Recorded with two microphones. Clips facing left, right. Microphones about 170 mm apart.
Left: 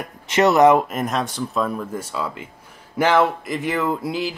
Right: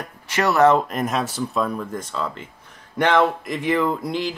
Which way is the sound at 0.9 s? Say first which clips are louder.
Even; centre (ahead or behind).